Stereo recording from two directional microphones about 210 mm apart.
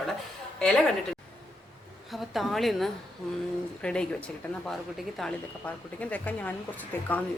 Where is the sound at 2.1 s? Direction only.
Centre (ahead or behind).